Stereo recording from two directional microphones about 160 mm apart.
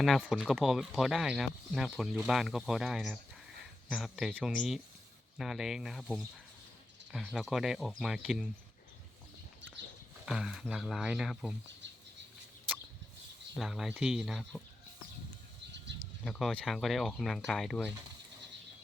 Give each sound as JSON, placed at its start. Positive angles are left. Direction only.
{"t": 0.0, "sound": "speech", "side_deg": 0}
{"t": 7.1, "sound": "speech", "side_deg": 0}
{"t": 10.2, "sound": "speech", "side_deg": 0}
{"t": 11.8, "sound": "a sound", "side_deg": -90}
{"t": 13.6, "sound": "speech", "side_deg": 0}
{"t": 15.9, "sound": "a sound", "side_deg": -90}
{"t": 16.2, "sound": "speech", "side_deg": 5}